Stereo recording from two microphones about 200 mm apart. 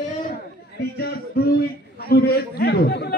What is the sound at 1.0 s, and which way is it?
A man's voice, 50° left (ahead or behind).